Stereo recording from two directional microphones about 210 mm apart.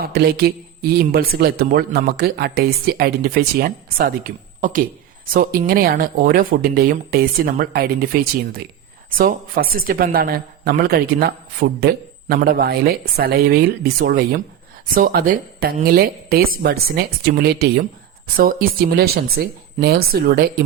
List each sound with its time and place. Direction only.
0.0 s speech: 45° right (ahead or behind)